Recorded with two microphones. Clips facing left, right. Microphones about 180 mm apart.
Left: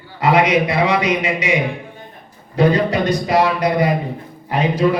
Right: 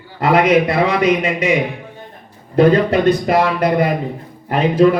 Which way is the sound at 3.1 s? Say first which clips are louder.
Right 2 dB; 55° right (ahead or behind).